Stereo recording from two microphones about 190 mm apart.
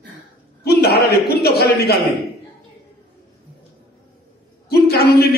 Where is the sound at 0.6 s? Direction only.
55° left (ahead or behind).